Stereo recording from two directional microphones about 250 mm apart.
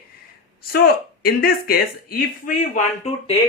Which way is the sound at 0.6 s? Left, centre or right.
Left.